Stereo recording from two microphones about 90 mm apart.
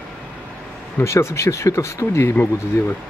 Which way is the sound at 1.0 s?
30° left (ahead or behind).